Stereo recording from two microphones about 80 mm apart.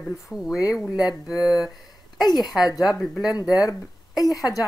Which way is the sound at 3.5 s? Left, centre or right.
Left.